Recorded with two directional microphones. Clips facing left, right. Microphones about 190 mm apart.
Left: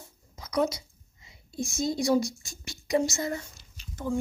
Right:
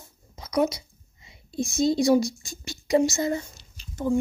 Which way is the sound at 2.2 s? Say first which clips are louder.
Right 5 dB; 90° right.